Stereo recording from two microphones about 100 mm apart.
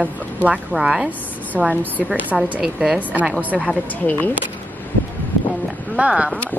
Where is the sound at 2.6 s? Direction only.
5° right (ahead or behind).